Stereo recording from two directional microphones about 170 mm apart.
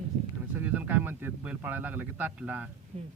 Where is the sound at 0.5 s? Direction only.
10° right (ahead or behind).